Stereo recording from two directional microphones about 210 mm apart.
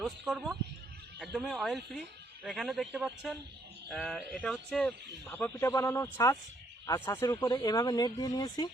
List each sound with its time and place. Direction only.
0.0 s a man's voice: centre (ahead or behind); by 8.7 s 20° left (ahead or behind)